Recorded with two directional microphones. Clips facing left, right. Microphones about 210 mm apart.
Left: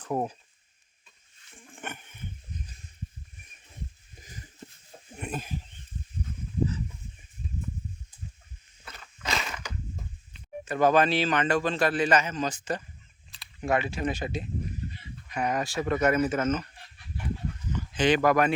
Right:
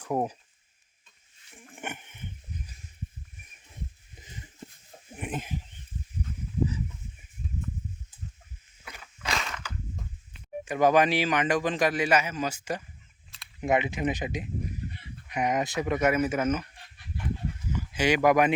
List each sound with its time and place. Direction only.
0.0 s speech: 10° right (ahead or behind)
1.5 s dog: 15° right (ahead or behind)
5.1 s a sound: 15° right (ahead or behind)
6.7 s fowl: 10° right (ahead or behind)
8.8 s a sound: 10° right (ahead or behind)
9.2 s crushing: centre (ahead or behind)
10.7 s a man's voice: 15° right (ahead or behind)
17.7 s speech: 10° right (ahead or behind)